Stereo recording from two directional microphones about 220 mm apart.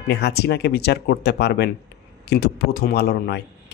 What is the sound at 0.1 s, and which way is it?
Speech, 45° left (ahead or behind).